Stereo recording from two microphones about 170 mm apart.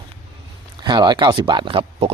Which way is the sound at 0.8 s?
25° right (ahead or behind).